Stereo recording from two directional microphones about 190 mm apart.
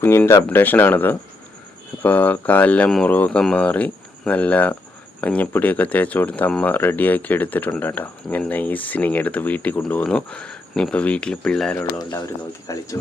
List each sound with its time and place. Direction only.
0.0 s speech: 10° left (ahead or behind)
12.6 s speech: 20° left (ahead or behind)